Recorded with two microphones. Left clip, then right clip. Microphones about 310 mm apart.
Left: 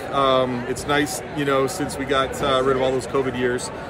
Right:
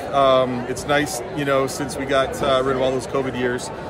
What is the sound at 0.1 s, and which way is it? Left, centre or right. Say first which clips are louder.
Speech: right 3 dB; centre.